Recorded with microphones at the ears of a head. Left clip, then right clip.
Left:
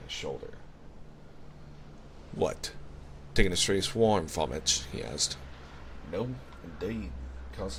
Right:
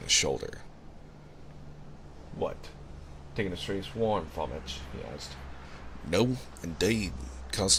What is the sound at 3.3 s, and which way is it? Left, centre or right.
Speech, left.